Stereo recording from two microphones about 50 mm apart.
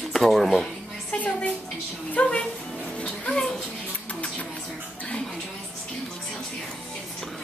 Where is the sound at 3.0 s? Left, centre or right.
Left.